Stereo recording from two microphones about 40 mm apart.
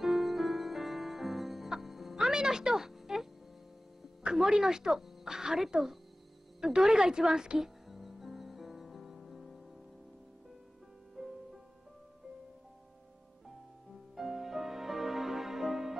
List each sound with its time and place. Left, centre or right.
0.0 s music: centre
2.1 s music: centre
4.2 s a woman's voice: right
6.6 s music: centre
11.2 s music: centre
14.1 s music: centre